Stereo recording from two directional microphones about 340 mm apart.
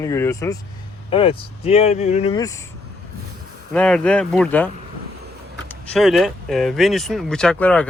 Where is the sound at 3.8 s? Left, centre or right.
Centre.